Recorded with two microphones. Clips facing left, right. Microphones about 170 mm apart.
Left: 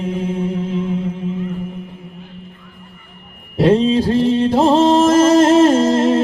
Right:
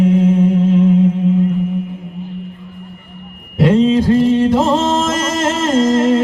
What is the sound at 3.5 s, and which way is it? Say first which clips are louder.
Music: right 1 dB; 35° left (ahead or behind).